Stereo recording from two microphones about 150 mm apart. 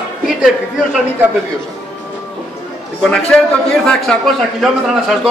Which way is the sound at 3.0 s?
5° left (ahead or behind).